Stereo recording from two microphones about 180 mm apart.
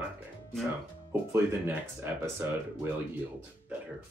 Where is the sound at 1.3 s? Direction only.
10° right (ahead or behind).